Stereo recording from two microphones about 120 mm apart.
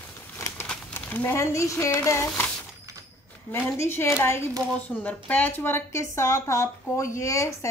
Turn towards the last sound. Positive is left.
turn(degrees=25)  # may be behind; listen again after turning